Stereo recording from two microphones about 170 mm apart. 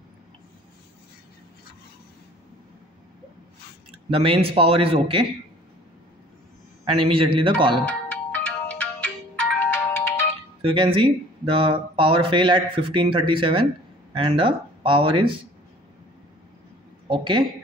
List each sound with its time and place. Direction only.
4.1 s speech: 35° right (ahead or behind)
7.0 s speech: 30° right (ahead or behind)
7.8 s music: 10° left (ahead or behind)
9.7 s ringtone: 15° left (ahead or behind)
10.6 s speech: 30° right (ahead or behind)
17.1 s speech: 30° right (ahead or behind)